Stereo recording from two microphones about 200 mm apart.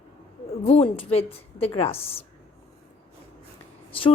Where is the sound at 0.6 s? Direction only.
30° left (ahead or behind).